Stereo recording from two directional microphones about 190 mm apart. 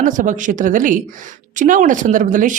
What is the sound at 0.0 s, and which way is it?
Speech, 40° right (ahead or behind).